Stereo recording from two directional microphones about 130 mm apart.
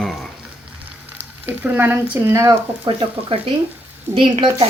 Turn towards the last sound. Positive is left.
turn(degrees=-40)  # may be behind; listen again after turning